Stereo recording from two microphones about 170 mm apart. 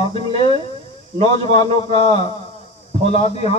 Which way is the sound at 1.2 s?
25° left (ahead or behind).